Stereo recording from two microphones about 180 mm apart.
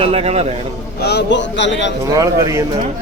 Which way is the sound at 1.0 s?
70° left (ahead or behind).